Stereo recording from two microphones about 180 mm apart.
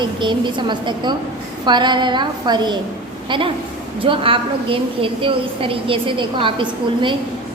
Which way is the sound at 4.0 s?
30° right (ahead or behind).